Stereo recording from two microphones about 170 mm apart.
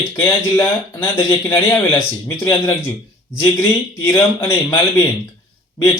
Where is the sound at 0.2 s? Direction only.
15° left (ahead or behind).